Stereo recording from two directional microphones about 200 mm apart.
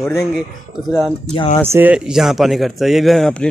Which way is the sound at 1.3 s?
30° left (ahead or behind).